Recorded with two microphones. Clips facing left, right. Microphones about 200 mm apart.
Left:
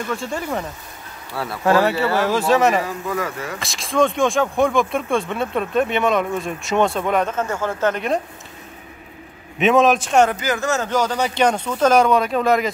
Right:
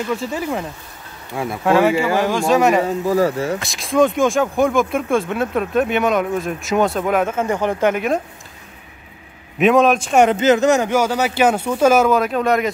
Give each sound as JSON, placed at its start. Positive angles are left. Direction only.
{"t": 0.1, "sound": "speech", "side_deg": -5}
{"t": 1.3, "sound": "speech", "side_deg": -15}
{"t": 1.6, "sound": "speech", "side_deg": 0}
{"t": 2.8, "sound": "speech", "side_deg": -30}
{"t": 3.5, "sound": "speech", "side_deg": 0}
{"t": 9.6, "sound": "speech", "side_deg": 0}
{"t": 10.1, "sound": "speech", "side_deg": -20}